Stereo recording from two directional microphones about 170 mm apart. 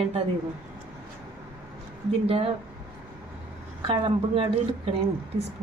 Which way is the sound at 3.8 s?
35° right (ahead or behind).